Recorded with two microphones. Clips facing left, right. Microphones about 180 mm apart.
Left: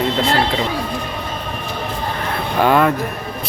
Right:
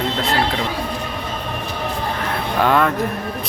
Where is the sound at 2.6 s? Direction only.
5° left (ahead or behind).